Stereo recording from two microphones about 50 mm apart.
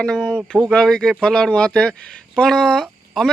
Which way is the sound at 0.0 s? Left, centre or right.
Centre.